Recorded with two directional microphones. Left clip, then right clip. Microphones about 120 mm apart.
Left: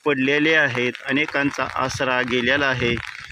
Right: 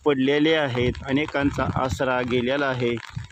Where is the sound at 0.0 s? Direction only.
15° right (ahead or behind).